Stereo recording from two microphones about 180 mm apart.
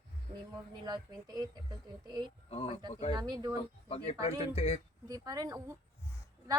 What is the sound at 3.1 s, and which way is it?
Speech, 20° right (ahead or behind).